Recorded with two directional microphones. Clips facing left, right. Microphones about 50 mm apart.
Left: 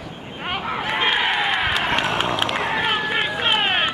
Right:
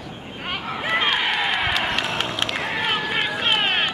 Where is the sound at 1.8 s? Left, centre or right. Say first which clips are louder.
Left 4 dB; centre.